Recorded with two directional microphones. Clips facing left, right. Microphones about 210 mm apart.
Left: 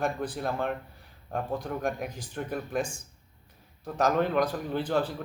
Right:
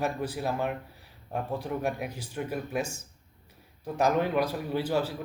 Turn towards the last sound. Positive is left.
turn(degrees=-10)  # may be behind; listen again after turning